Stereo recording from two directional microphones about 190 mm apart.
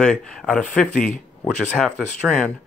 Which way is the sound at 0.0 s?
5° left (ahead or behind).